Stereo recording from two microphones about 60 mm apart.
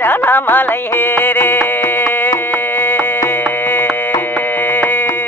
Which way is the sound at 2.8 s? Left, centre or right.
Left.